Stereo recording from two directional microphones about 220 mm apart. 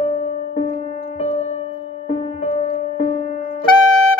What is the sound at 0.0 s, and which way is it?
Music, 30° left (ahead or behind).